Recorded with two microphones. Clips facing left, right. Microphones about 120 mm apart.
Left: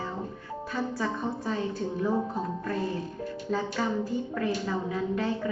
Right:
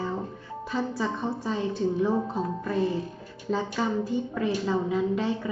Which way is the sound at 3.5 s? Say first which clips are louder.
Right 2 dB; 20° right (ahead or behind).